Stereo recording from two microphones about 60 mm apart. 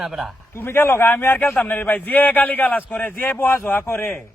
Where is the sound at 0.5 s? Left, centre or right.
Left.